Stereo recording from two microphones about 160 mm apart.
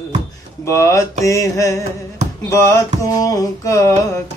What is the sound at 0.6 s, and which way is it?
Mantra, 15° left (ahead or behind).